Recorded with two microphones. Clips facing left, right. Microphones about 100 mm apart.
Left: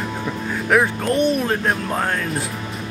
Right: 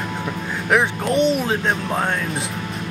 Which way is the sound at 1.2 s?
90° right.